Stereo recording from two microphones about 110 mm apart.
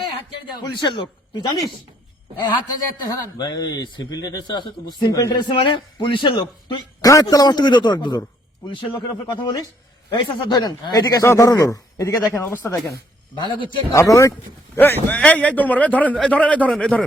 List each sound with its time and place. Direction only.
0.8 s a man's voice: 40° left (ahead or behind)
7.0 s a man's voice: 35° left (ahead or behind)
8.6 s speech: 50° left (ahead or behind)
10.1 s a man's voice: 45° left (ahead or behind); by 12.7 s 20° left (ahead or behind)
13.4 s speech: 45° left (ahead or behind)
13.9 s speech: 25° left (ahead or behind)
14.8 s a man's voice: 20° left (ahead or behind)